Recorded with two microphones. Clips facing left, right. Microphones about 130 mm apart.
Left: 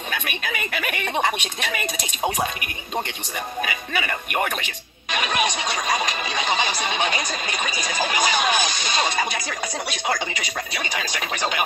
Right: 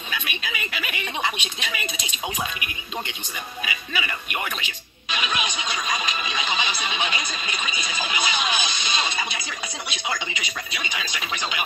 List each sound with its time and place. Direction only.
0.1 s speech: 50° left (ahead or behind)
3.6 s music: 50° left (ahead or behind)